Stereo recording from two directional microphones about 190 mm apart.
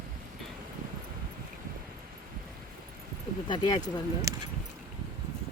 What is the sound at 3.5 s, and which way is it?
Speech, 20° left (ahead or behind).